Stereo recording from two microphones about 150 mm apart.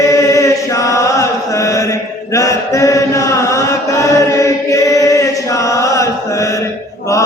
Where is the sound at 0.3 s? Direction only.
20° left (ahead or behind).